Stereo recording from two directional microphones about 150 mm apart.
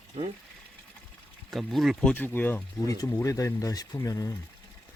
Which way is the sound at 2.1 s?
15° left (ahead or behind).